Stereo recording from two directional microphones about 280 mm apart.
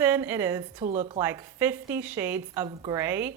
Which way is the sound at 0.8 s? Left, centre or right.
Right.